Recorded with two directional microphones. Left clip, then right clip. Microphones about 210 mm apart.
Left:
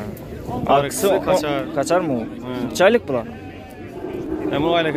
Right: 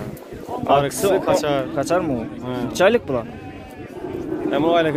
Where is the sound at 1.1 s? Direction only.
30° right (ahead or behind).